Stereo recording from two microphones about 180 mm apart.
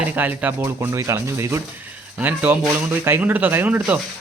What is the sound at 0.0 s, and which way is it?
Speech, 10° right (ahead or behind).